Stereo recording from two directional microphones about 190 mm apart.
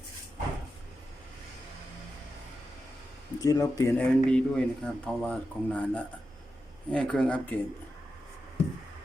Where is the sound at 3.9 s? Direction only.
5° left (ahead or behind).